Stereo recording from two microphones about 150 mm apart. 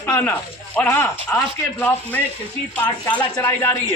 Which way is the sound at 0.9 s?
20° left (ahead or behind).